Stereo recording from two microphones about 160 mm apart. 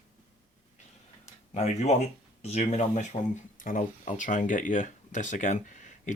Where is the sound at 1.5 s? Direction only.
45° left (ahead or behind).